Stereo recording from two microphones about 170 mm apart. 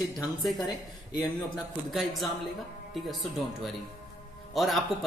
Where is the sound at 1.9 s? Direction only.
Centre (ahead or behind).